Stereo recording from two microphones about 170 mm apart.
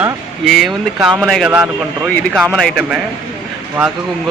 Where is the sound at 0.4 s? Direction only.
Centre (ahead or behind).